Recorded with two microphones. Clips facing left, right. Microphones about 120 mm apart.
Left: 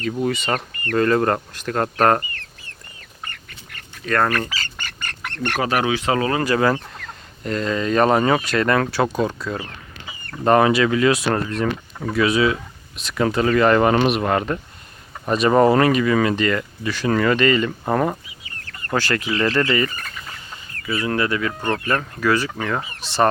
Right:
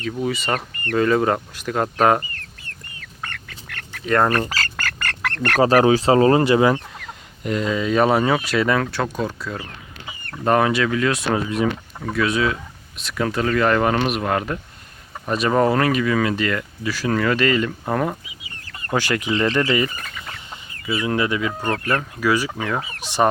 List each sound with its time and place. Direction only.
0.0 s speech: centre (ahead or behind)
3.0 s duck: 90° right
4.0 s speech: 20° right (ahead or behind)
4.5 s duck: 90° right
5.5 s speech: 35° right (ahead or behind); by 18.2 s 5° left (ahead or behind)
18.9 s speech: 15° right (ahead or behind)
19.7 s chicken: 15° right (ahead or behind)
20.8 s speech: 10° right (ahead or behind)